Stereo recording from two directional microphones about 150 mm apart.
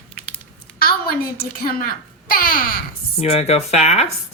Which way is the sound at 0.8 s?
90° left.